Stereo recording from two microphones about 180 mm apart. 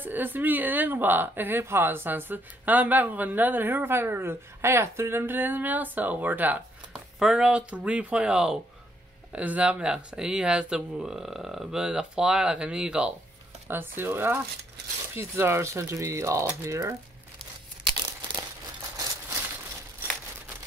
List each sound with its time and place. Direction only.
0.0 s a woman's voice: 10° right (ahead or behind)